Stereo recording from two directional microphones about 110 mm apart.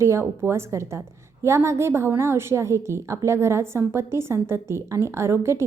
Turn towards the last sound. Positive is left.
turn(degrees=-25)  # may be behind; listen again after turning